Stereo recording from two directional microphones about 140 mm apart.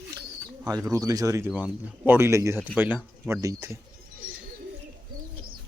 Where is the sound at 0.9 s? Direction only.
25° right (ahead or behind).